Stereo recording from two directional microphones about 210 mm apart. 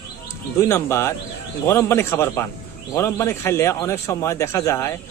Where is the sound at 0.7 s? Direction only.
10° left (ahead or behind).